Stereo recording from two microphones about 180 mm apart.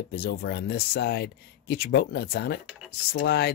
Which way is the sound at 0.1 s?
60° left (ahead or behind).